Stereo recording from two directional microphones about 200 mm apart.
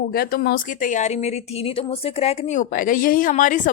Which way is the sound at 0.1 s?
50° left (ahead or behind).